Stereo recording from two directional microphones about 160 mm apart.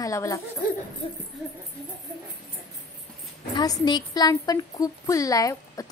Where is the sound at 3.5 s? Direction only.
25° left (ahead or behind).